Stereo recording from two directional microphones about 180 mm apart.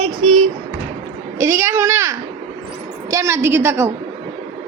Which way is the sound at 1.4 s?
15° right (ahead or behind).